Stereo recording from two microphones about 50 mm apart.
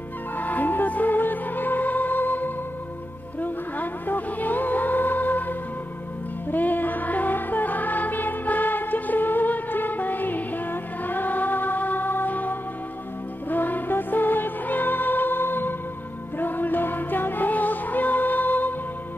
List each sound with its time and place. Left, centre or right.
0.4 s music: left